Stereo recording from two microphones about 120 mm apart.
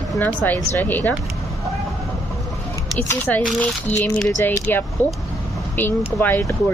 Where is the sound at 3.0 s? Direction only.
15° left (ahead or behind).